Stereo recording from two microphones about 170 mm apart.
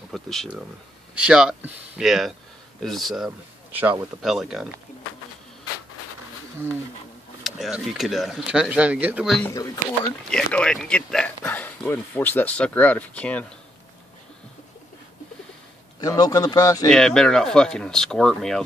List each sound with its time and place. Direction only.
0.1 s speech: centre (ahead or behind)
3.3 s a man's voice: 10° right (ahead or behind)
4.2 s speech: centre (ahead or behind)
7.4 s speech: centre (ahead or behind)
9.5 s speech: 20° left (ahead or behind)
10.3 s speech: 5° left (ahead or behind)
16.0 s speech: 20° left (ahead or behind)
16.9 s speech: 5° left (ahead or behind)